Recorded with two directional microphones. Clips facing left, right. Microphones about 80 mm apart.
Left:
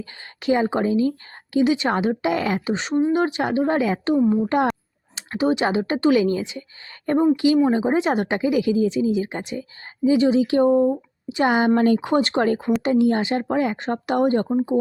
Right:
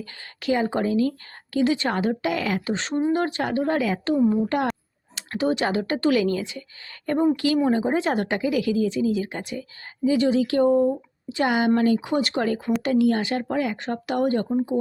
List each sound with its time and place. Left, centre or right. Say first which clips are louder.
0.0 s a woman's voice: left 3 dB; left
2.6 s speech: left 3 dB; centre
4.2 s speech: even; centre
5.1 s a woman's voice: left 3 dB; centre
11.9 s a woman's voice: left 3 dB; left